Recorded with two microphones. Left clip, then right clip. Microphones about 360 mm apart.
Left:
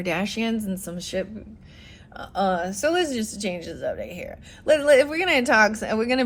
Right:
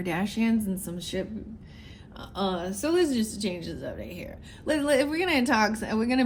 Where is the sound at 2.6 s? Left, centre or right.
Left.